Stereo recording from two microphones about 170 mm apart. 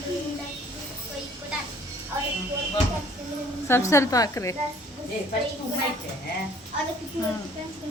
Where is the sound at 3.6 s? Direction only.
15° left (ahead or behind).